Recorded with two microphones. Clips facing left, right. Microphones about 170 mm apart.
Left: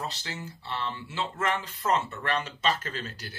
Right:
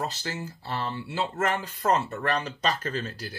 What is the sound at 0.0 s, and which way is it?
Speech, 40° right (ahead or behind).